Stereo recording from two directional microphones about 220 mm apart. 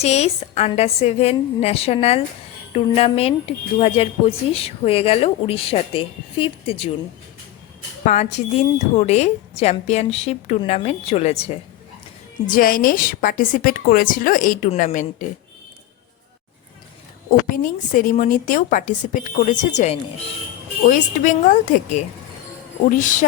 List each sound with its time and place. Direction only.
0.0 s speech: 30° left (ahead or behind)
8.0 s a woman's voice: 30° left (ahead or behind)
12.5 s a woman's voice: 40° left (ahead or behind)
17.5 s a woman's voice: 40° left (ahead or behind)
21.2 s a woman's voice: 35° left (ahead or behind)